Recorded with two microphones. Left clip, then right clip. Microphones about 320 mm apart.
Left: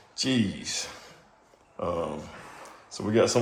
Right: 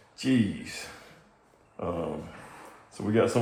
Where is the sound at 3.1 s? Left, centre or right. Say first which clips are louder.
Left 2 dB; centre.